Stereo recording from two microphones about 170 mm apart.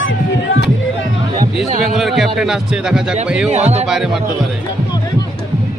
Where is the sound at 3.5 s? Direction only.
40° right (ahead or behind).